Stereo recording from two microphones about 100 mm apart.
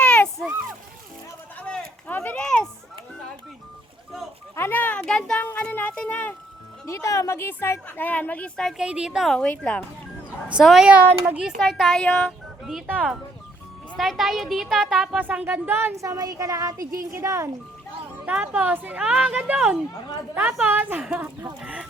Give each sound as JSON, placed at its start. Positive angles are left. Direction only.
{"t": 0.0, "sound": "a sound", "side_deg": 10}
{"t": 1.5, "sound": "a sound", "side_deg": 10}
{"t": 4.5, "sound": "a sound", "side_deg": 20}
{"t": 5.5, "sound": "music", "side_deg": 15}
{"t": 6.8, "sound": "a woman's voice", "side_deg": 30}
{"t": 8.8, "sound": "a woman's voice", "side_deg": -10}
{"t": 10.5, "sound": "speech", "side_deg": -5}
{"t": 11.4, "sound": "speech", "side_deg": 0}
{"t": 13.9, "sound": "a woman's voice", "side_deg": 0}
{"t": 15.2, "sound": "speech", "side_deg": -15}
{"t": 16.0, "sound": "a woman's voice", "side_deg": -35}
{"t": 18.3, "sound": "speech", "side_deg": -10}
{"t": 19.0, "sound": "speech", "side_deg": -10}
{"t": 21.6, "sound": "chicken", "side_deg": -10}